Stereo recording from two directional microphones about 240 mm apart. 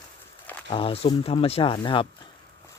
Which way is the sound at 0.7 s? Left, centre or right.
Left.